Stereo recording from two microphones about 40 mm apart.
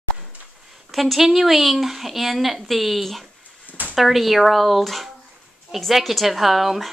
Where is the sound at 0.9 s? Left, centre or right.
Centre.